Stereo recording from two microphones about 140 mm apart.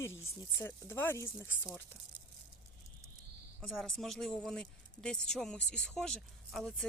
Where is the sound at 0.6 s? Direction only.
15° left (ahead or behind).